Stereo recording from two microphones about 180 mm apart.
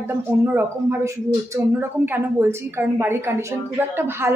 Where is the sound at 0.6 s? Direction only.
15° right (ahead or behind).